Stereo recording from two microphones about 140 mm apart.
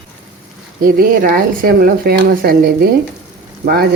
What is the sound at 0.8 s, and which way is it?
Speech, 90° right.